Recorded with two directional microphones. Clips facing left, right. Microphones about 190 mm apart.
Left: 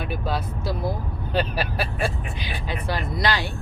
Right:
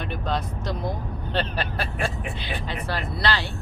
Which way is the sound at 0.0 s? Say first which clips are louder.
Left 1 dB; 5° left (ahead or behind).